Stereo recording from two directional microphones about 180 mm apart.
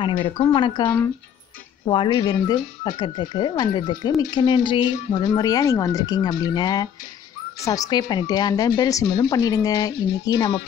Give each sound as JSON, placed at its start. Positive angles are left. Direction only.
{"t": 0.0, "sound": "speech", "side_deg": 30}
{"t": 0.8, "sound": "speech", "side_deg": 10}
{"t": 1.9, "sound": "speech", "side_deg": 25}